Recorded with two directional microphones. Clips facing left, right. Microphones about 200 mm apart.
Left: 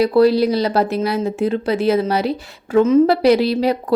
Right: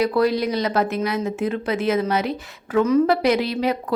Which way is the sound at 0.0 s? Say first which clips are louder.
Left 6 dB; 30° left (ahead or behind).